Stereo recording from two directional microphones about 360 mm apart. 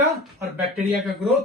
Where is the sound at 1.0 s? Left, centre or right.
Centre.